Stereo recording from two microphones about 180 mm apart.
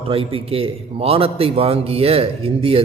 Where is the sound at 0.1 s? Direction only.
30° right (ahead or behind).